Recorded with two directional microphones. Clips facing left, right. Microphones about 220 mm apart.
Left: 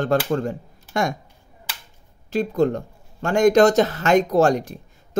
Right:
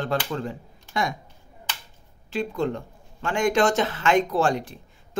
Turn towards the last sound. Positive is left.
turn(degrees=40)  # may be behind; listen again after turning